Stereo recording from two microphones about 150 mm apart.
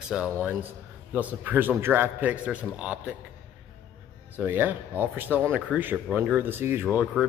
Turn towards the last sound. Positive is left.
turn(degrees=-10)  # may be behind; listen again after turning